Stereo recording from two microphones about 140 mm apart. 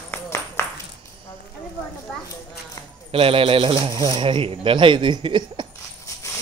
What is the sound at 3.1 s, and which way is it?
Speech, 40° right (ahead or behind).